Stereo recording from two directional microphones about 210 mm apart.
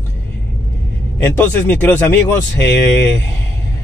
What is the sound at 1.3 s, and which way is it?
Speech, 10° left (ahead or behind).